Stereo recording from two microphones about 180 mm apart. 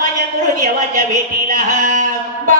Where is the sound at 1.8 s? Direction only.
45° right (ahead or behind).